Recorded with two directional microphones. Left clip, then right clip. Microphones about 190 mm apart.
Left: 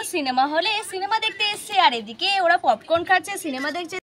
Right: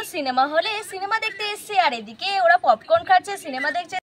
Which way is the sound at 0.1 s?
55° right (ahead or behind).